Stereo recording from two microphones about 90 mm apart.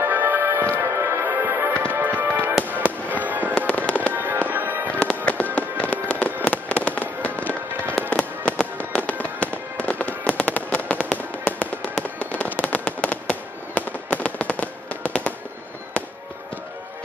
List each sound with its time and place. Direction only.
0.0 s music: 25° right (ahead or behind)
2.8 s fireworks: 20° right (ahead or behind)
3.5 s fireworks: 15° left (ahead or behind)
4.1 s fireworks: 20° right (ahead or behind)
4.9 s fireworks: 15° left (ahead or behind)